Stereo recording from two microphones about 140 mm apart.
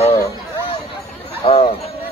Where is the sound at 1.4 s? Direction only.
40° left (ahead or behind).